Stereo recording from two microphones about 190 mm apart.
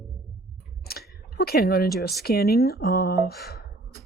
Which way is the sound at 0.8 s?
55° left (ahead or behind).